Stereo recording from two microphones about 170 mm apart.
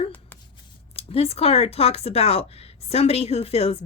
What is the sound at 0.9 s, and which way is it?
Speech, 35° left (ahead or behind).